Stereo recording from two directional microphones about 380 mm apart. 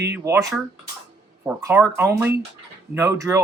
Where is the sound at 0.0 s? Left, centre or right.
Centre.